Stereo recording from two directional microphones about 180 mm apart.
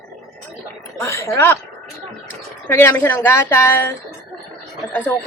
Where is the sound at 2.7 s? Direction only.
15° left (ahead or behind).